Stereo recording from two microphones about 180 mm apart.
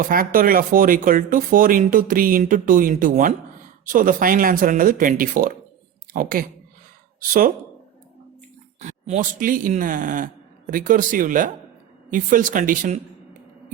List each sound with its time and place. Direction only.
0.0 s speech: 50° right (ahead or behind)
8.8 s speech: 40° right (ahead or behind)